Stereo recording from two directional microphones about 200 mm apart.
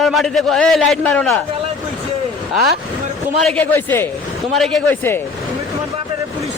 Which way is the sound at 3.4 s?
5° left (ahead or behind).